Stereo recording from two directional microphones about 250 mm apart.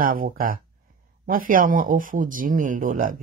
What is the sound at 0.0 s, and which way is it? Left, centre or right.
Speech, right.